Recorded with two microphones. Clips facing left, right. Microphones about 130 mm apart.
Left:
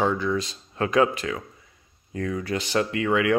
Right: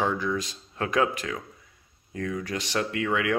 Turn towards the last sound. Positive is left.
turn(degrees=0)  # may be behind; listen again after turning